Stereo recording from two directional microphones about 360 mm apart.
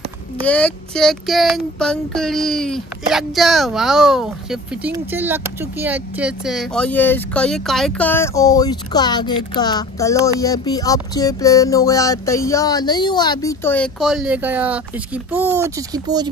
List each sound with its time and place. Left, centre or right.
0.5 s child singing: centre
15.3 s speech: centre